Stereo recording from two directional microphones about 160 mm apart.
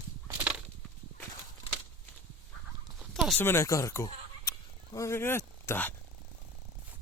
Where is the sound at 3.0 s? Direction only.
Centre (ahead or behind).